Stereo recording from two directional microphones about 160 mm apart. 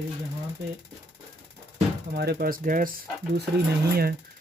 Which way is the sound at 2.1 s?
80° right.